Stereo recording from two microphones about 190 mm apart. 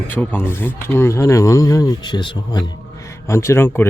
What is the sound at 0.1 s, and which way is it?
Speech, 10° left (ahead or behind).